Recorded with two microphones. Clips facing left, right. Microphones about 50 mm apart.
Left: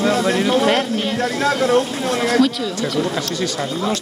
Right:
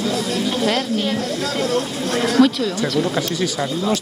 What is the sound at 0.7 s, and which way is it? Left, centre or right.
Speech, left.